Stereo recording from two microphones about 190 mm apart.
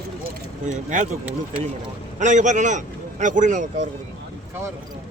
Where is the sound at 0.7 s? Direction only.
40° right (ahead or behind).